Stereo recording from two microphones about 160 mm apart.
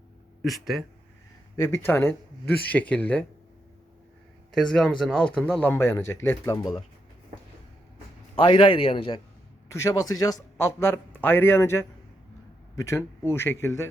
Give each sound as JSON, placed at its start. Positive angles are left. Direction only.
{"t": 0.4, "sound": "speech", "side_deg": 0}
{"t": 1.6, "sound": "speech", "side_deg": 15}
{"t": 4.5, "sound": "speech", "side_deg": 0}
{"t": 8.4, "sound": "a man's voice", "side_deg": 30}
{"t": 9.7, "sound": "speech", "side_deg": 20}